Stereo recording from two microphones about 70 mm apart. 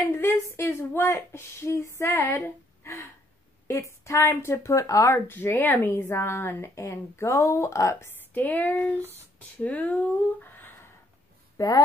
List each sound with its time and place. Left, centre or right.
0.0 s speech: left
2.8 s gasp: left
3.6 s speech: left
5.3 s speech: left
8.3 s speech: left
11.5 s speech: left